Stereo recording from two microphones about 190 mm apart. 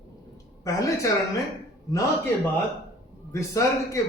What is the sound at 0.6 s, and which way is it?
Speech, 15° left (ahead or behind).